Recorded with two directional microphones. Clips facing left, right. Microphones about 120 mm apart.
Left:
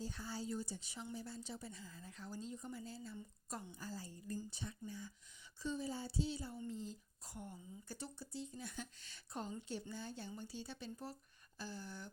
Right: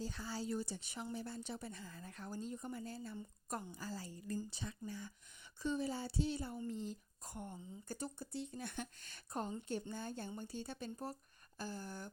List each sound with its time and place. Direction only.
0.0 s speech: 90° right; by 3.2 s 60° right (ahead or behind)
3.8 s a woman's voice: 90° right
5.6 s speech: 65° right (ahead or behind); by 8.3 s 45° right (ahead or behind)
8.3 s speech: 60° right (ahead or behind)